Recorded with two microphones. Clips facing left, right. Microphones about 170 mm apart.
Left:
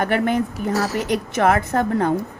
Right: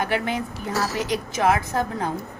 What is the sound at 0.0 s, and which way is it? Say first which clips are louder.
A woman's voice: left 5 dB; 55° left (ahead or behind).